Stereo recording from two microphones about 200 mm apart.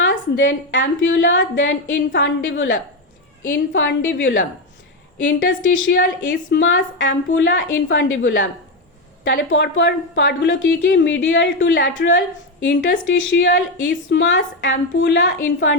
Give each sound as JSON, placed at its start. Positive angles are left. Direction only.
{"t": 0.0, "sound": "a woman's voice", "side_deg": 65}